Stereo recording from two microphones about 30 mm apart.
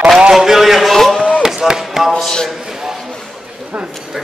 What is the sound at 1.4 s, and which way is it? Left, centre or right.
Chop, centre.